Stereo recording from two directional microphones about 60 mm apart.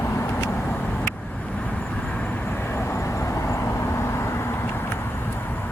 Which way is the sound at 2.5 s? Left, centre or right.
Left.